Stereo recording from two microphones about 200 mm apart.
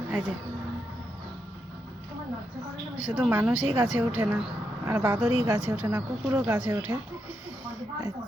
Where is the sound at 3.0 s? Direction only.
5° right (ahead or behind).